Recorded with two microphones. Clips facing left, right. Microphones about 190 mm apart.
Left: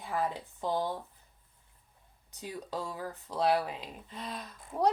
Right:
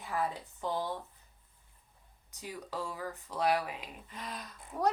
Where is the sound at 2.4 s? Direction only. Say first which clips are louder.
Left 2 dB; 20° left (ahead or behind).